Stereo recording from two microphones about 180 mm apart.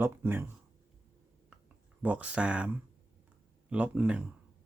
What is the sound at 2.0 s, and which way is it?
Speech, 5° right (ahead or behind).